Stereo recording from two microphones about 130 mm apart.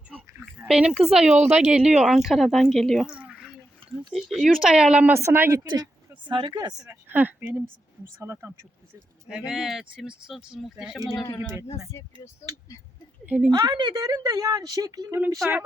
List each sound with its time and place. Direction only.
0.7 s speech: 5° right (ahead or behind)
1.3 s speech: 60° right (ahead or behind)
1.7 s speech: 5° right (ahead or behind)
5.5 s speech: 30° right (ahead or behind)
7.1 s speech: 15° right (ahead or behind)
9.5 s speech: 5° right (ahead or behind)
11.1 s a man's voice: 30° left (ahead or behind)
13.2 s speech: 10° right (ahead or behind)
13.7 s speech: 35° right (ahead or behind)